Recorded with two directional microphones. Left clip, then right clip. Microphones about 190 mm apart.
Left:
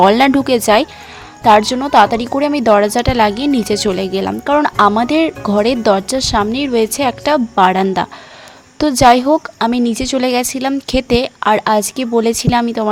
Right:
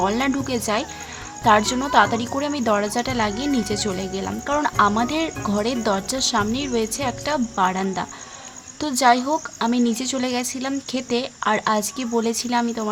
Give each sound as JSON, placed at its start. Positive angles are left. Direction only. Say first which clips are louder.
{"t": 0.0, "sound": "a woman's voice", "louder": "left 12 dB", "side_deg": 45}